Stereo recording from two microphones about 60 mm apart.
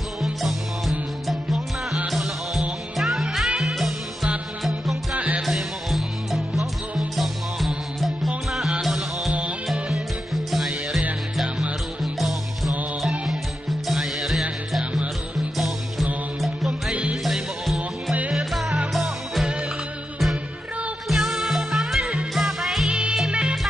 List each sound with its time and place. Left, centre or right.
0.2 s music: centre
5.1 s music: right
5.4 s music: centre
11.3 s music: centre
12.0 s music: centre
13.8 s music: centre
15.5 s music: centre
16.9 s music: centre
17.2 s music: centre
21.1 s music: centre
22.8 s music: centre